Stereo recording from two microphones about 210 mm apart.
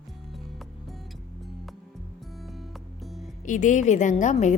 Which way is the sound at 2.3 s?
Centre (ahead or behind).